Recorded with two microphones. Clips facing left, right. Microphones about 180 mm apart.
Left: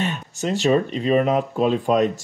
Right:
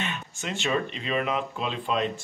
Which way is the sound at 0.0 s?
40° left (ahead or behind).